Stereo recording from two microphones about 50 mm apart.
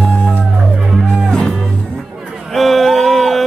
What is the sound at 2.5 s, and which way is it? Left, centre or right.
Music, centre.